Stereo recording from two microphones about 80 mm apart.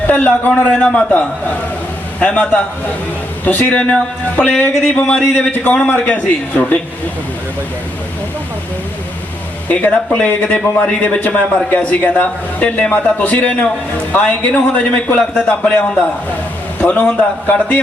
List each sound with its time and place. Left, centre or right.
0.1 s a man's voice: left
9.6 s a man's voice: centre